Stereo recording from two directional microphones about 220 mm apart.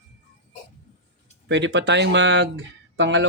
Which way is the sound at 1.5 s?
50° right (ahead or behind).